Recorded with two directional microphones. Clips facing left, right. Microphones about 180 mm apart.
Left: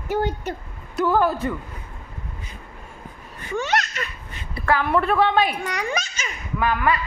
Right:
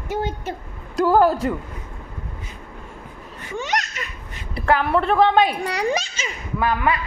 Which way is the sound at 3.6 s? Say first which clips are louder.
Left 2 dB; 20° right (ahead or behind).